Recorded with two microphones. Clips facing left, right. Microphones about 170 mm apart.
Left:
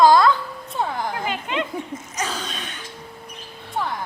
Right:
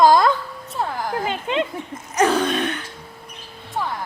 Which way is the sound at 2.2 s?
60° right (ahead or behind).